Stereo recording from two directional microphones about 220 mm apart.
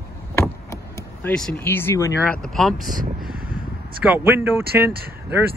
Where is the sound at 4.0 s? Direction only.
10° right (ahead or behind).